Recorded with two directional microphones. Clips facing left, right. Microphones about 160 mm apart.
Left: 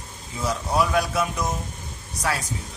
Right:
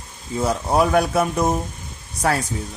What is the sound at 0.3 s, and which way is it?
Speech, 55° right (ahead or behind).